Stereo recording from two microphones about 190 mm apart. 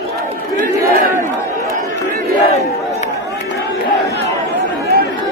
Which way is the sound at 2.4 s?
35° left (ahead or behind).